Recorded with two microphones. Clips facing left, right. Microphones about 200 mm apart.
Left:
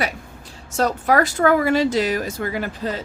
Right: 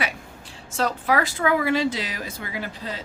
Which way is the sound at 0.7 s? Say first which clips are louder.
Left 4 dB; 45° left (ahead or behind).